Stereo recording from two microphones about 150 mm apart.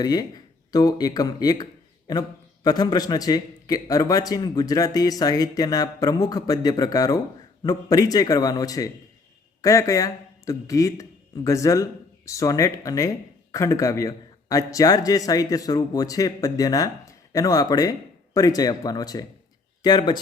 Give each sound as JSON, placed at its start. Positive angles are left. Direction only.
{"t": 0.0, "sound": "speech", "side_deg": 25}
{"t": 2.6, "sound": "speech", "side_deg": 25}